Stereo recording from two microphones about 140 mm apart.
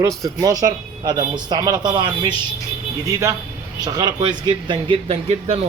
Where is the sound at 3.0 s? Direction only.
20° right (ahead or behind).